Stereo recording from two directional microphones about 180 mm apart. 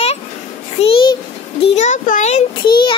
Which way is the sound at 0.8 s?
30° left (ahead or behind).